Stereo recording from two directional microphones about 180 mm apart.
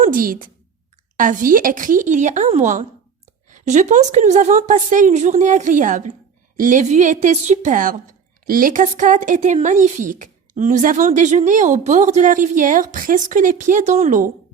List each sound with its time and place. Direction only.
0.0 s speech: 50° right (ahead or behind)